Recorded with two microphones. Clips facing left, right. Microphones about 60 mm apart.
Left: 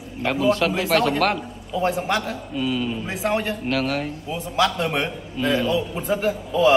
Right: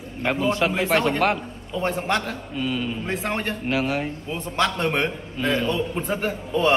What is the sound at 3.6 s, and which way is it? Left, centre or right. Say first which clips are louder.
Speech: even; centre.